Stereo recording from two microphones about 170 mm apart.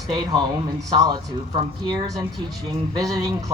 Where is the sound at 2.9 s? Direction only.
20° right (ahead or behind).